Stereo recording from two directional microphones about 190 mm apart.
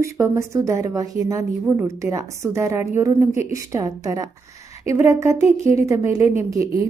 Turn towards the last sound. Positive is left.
turn(degrees=-15)  # may be behind; listen again after turning